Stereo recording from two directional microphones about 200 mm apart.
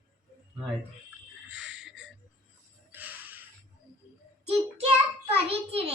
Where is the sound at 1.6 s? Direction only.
65° right (ahead or behind).